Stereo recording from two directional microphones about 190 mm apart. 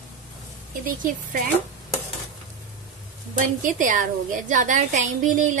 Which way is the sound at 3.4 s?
40° right (ahead or behind).